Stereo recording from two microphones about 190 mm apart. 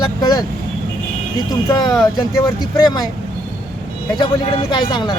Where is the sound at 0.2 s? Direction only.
20° left (ahead or behind).